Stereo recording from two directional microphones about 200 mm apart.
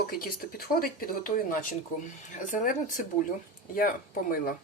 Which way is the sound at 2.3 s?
40° left (ahead or behind).